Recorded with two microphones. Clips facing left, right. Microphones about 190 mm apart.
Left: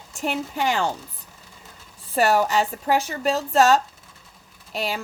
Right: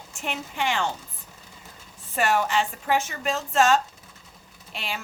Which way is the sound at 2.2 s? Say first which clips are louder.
Left 4 dB; 40° left (ahead or behind).